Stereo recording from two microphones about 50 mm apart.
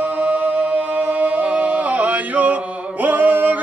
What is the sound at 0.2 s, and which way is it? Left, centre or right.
Music, right.